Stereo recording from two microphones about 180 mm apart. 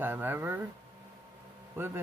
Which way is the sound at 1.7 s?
10° right (ahead or behind).